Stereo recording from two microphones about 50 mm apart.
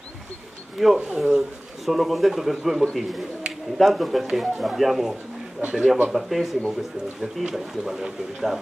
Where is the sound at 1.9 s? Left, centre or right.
Centre.